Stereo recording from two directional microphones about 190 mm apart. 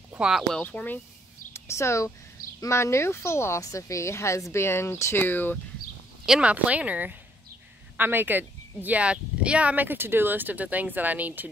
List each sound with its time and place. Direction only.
0.1 s speech: 5° right (ahead or behind)
6.2 s speech: 5° right (ahead or behind)